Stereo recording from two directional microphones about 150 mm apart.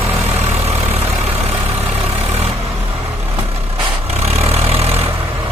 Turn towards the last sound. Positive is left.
turn(degrees=-40)  # may be behind; listen again after turning